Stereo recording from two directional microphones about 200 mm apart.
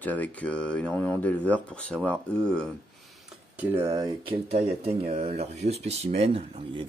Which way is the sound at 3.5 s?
10° right (ahead or behind).